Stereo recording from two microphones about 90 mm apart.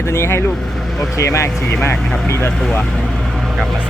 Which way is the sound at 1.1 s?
35° left (ahead or behind).